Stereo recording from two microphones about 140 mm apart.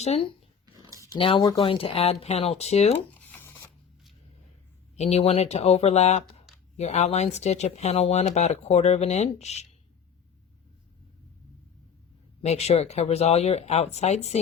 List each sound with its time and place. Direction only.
0.0 s speech: 50° left (ahead or behind)
0.6 s a sound: 25° right (ahead or behind)
1.2 s speech: 40° left (ahead or behind)
3.2 s a sound: 15° left (ahead or behind)
4.9 s speech: 50° left (ahead or behind)
12.4 s speech: 50° left (ahead or behind)